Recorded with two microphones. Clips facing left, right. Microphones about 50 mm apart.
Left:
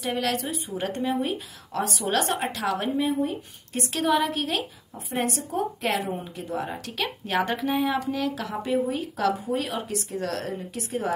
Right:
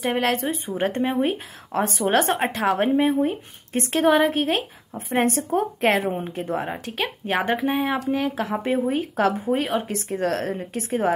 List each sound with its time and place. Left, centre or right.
0.0 s speech: right